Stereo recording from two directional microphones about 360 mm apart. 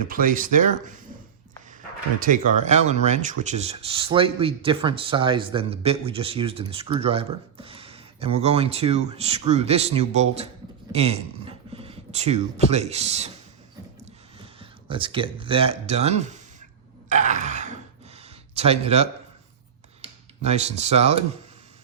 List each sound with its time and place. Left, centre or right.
0.0 s speech: right
2.2 s speech: right
14.6 s speech: centre
17.1 s groan: centre
18.5 s speech: centre